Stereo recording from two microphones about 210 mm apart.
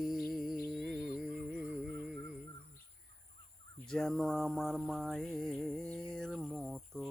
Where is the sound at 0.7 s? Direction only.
Centre (ahead or behind).